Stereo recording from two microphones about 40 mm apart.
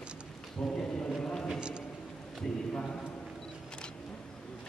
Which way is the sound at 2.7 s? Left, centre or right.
Left.